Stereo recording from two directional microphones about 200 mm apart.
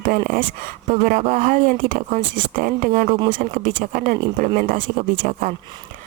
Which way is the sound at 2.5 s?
45° right (ahead or behind).